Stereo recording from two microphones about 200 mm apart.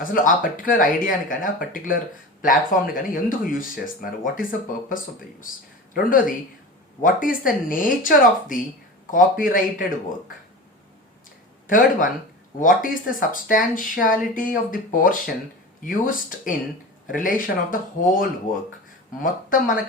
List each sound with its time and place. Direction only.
0.0 s speech: 40° left (ahead or behind)
5.9 s speech: 45° left (ahead or behind)
11.7 s speech: 40° left (ahead or behind)